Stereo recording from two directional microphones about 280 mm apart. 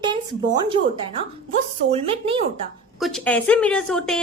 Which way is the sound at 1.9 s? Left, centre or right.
Centre.